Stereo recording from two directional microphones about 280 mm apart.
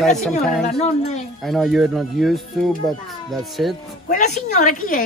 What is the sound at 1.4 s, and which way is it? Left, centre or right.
Speech, centre.